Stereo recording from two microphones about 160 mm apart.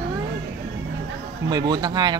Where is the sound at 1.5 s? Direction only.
25° right (ahead or behind).